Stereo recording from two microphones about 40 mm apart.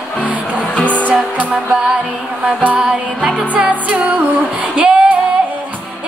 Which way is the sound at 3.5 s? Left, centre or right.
Right.